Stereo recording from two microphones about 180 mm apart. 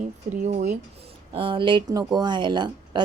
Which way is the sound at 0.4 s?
40° right (ahead or behind).